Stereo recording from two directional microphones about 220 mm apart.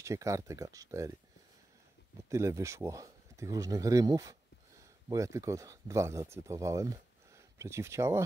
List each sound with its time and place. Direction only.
0.0 s speech: 15° right (ahead or behind)
2.2 s speech: 15° right (ahead or behind)